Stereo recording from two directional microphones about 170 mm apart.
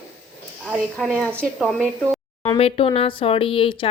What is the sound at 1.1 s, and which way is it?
Speech, 5° left (ahead or behind).